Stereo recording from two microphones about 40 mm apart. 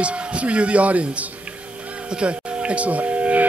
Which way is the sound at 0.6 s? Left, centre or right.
Right.